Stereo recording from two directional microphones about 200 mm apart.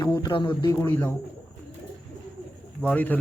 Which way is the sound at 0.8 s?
10° left (ahead or behind).